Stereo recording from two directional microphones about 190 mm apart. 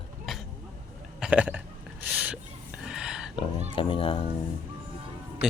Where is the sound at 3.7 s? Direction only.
25° left (ahead or behind).